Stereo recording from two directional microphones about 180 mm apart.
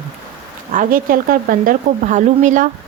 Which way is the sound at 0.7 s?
50° right (ahead or behind).